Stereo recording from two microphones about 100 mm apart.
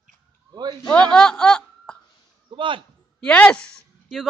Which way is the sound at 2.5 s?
55° right (ahead or behind).